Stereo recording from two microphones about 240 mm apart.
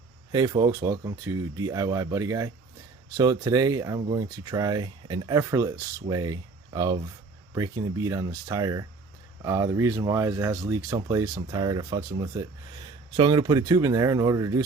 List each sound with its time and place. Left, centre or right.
0.3 s speech: centre